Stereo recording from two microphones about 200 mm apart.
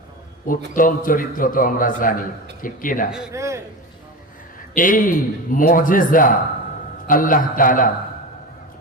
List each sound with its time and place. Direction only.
0.4 s a man's voice: 45° left (ahead or behind)
3.1 s a man's voice: 5° right (ahead or behind)
3.3 s a man's voice: 15° right (ahead or behind)
4.7 s a man's voice: 45° left (ahead or behind)